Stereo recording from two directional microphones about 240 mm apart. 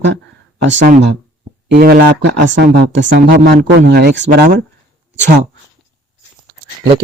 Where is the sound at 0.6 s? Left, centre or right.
Right.